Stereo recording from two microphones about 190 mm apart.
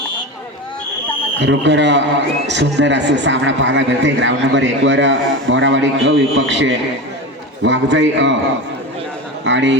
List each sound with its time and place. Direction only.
1.4 s a man's voice: 70° right (ahead or behind)
9.4 s a man's voice: 75° right (ahead or behind)